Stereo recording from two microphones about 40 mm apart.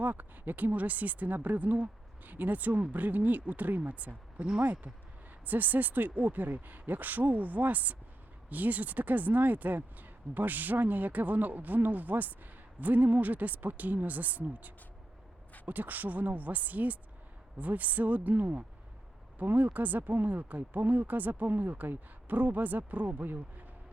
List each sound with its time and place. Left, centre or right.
0.0 s speech: right